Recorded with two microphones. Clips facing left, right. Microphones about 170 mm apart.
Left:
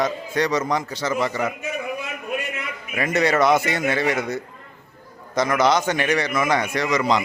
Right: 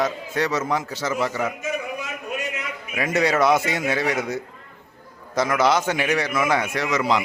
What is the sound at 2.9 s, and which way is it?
A man's voice, 5° right (ahead or behind).